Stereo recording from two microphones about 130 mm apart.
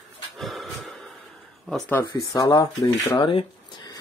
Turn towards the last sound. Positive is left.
turn(degrees=40)  # may be behind; listen again after turning